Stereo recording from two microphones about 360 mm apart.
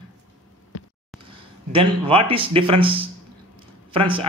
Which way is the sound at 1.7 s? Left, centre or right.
Centre.